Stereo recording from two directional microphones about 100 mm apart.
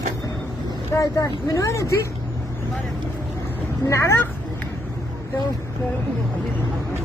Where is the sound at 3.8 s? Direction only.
30° left (ahead or behind).